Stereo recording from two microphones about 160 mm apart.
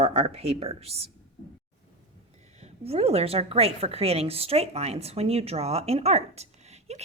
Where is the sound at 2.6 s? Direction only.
40° right (ahead or behind).